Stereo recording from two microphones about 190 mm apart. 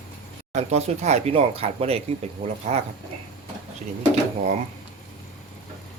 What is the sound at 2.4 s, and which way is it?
Speech, 45° right (ahead or behind).